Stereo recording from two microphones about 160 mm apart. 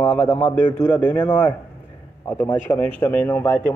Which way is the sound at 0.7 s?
15° left (ahead or behind).